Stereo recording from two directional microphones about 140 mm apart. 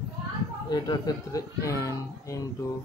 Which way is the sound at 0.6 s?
30° left (ahead or behind).